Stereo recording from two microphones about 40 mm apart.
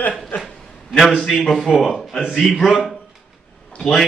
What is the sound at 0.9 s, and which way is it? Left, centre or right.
A man's voice, centre.